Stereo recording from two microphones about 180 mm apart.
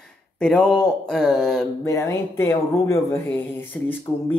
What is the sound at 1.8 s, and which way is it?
Speech, 15° left (ahead or behind).